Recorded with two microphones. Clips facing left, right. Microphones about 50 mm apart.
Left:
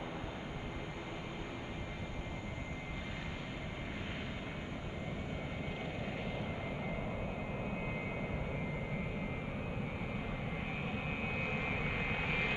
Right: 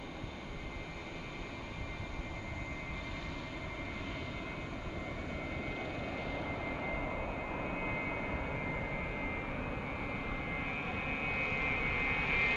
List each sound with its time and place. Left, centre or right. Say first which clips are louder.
5.9 s vehicle: right 1 dB; left
6.9 s vehicle: right 2 dB; right
11.5 s vehicle: right 3 dB; right
11.9 s vehicle: right 3 dB; centre